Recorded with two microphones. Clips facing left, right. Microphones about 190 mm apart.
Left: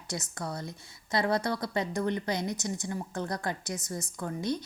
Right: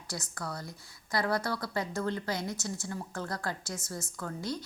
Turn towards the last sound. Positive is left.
turn(degrees=20)  # may be behind; listen again after turning